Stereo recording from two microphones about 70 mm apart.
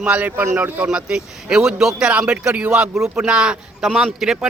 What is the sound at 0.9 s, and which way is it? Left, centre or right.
Speech, centre.